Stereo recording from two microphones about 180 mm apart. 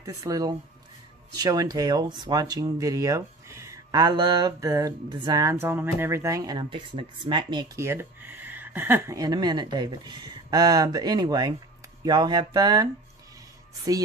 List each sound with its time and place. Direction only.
0.0 s speech: 20° right (ahead or behind)